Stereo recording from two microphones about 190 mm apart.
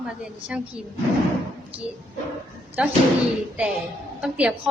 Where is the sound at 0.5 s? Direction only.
5° right (ahead or behind).